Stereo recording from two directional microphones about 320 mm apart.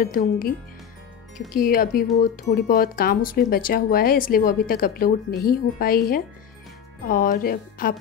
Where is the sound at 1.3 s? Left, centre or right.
Left.